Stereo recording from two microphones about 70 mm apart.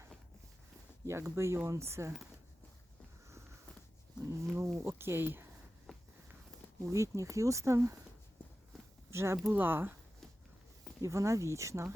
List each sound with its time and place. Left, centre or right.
1.0 s speech: right
4.5 s speech: right
5.9 s walk: centre
6.8 s speech: right
9.0 s speech: right
9.5 s speech: right
11.0 s speech: right